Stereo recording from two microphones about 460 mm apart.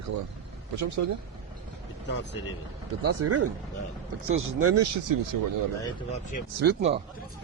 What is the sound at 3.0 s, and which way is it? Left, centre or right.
Speech, right.